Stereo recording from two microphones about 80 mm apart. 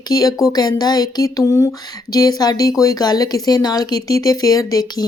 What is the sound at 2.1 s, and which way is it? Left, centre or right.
Speech, left.